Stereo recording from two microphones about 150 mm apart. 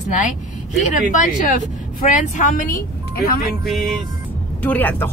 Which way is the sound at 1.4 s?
65° left (ahead or behind).